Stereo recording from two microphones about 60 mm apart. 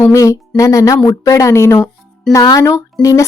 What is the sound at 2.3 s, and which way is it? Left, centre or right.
Speech, left.